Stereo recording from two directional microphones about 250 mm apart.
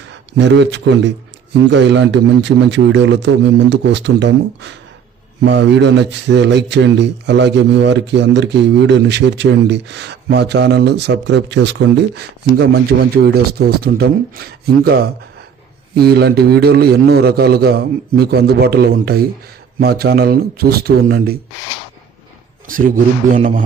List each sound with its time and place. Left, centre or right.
0.3 s a man's voice: right
22.6 s a man's voice: right